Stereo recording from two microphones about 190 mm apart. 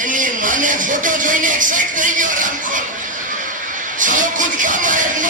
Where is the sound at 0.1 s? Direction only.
45° right (ahead or behind).